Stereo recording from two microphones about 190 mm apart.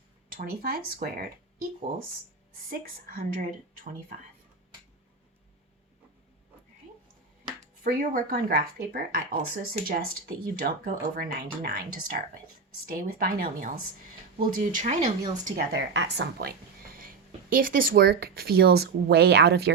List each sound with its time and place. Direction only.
0.3 s speech: 50° right (ahead or behind)
2.6 s speech: 50° right (ahead or behind)
7.9 s speech: 50° right (ahead or behind)
15.4 s speech: 55° right (ahead or behind)
17.0 s speech: 45° right (ahead or behind)